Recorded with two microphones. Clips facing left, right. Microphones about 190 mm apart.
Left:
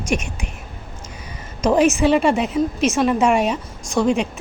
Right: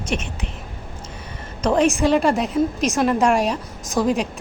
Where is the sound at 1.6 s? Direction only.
5° left (ahead or behind).